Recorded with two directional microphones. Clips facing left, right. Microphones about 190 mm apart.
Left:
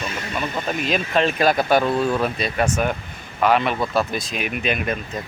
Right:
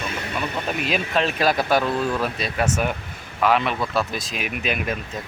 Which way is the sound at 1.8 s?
25° left (ahead or behind).